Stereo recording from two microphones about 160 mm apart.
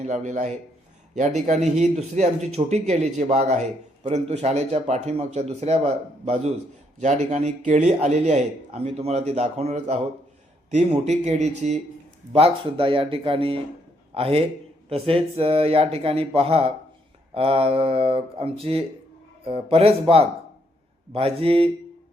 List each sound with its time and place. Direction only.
0.0 s a man's voice: 50° right (ahead or behind)